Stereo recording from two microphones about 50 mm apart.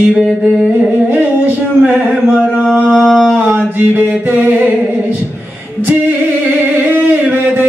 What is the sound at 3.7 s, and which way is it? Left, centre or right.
Mantra, right.